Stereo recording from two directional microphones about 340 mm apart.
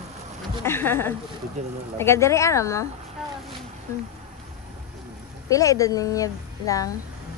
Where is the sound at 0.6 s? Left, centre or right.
Centre.